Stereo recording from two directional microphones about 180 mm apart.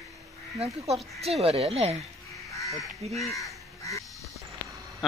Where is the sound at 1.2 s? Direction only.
35° right (ahead or behind).